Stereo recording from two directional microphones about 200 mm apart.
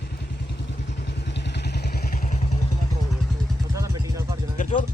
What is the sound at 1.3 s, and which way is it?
Vehicle, 60° left (ahead or behind).